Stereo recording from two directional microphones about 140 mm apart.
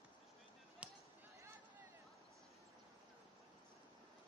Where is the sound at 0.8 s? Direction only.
10° right (ahead or behind).